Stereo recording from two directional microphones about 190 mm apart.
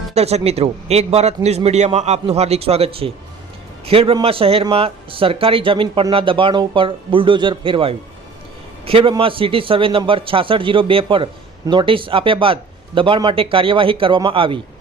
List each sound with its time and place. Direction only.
0.1 s a man's voice: 35° right (ahead or behind)